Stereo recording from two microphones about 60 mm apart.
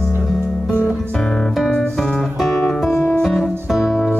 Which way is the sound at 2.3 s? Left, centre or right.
Centre.